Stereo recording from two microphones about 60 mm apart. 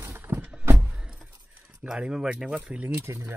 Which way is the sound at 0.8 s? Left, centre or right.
Centre.